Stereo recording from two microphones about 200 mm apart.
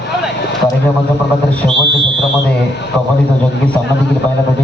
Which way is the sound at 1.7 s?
60° right (ahead or behind).